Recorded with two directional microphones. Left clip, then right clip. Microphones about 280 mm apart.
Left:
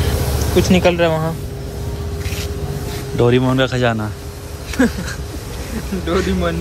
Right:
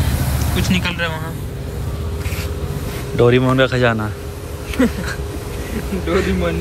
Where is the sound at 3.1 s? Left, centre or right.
Centre.